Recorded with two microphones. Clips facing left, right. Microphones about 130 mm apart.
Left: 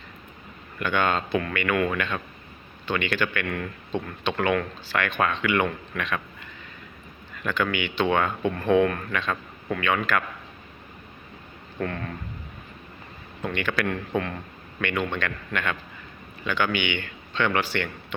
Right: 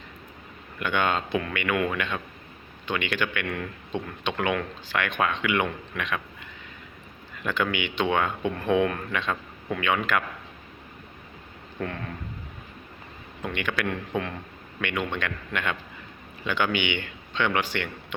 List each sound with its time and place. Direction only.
0.8 s speech: 15° right (ahead or behind)
7.4 s speech: 20° right (ahead or behind)
11.8 s speech: 5° right (ahead or behind)
13.4 s a man's voice: 15° right (ahead or behind)